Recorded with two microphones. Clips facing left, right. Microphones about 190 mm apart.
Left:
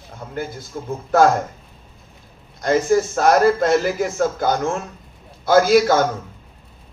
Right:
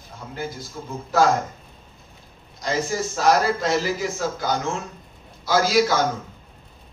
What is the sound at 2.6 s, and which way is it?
A man's voice, 55° left (ahead or behind).